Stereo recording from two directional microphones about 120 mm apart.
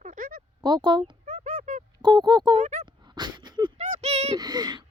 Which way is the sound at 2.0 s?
35° right (ahead or behind).